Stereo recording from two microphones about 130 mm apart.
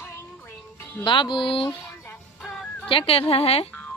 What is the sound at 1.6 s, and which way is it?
Music, 15° left (ahead or behind).